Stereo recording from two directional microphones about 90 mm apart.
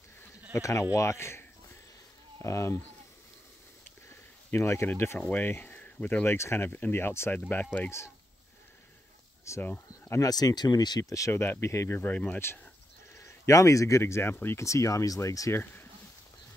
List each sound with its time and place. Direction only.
0.5 s speech: 35° left (ahead or behind)
2.4 s speech: 30° left (ahead or behind)
4.5 s speech: 30° left (ahead or behind)
6.2 s speech: 30° left (ahead or behind)
9.6 s speech: 20° left (ahead or behind)
10.1 s speech: 45° left (ahead or behind)
12.0 s speech: 20° left (ahead or behind)
13.1 s speech: 35° left (ahead or behind)
15.6 s a sound: 20° left (ahead or behind)